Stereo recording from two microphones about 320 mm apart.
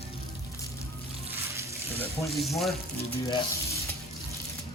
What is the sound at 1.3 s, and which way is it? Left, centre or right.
Water, centre.